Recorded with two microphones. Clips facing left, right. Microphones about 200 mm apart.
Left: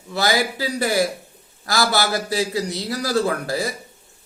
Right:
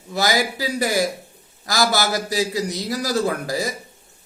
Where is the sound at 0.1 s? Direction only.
20° right (ahead or behind).